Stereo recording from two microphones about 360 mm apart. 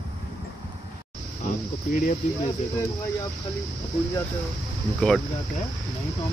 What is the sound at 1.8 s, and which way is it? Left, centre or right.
Speech, left.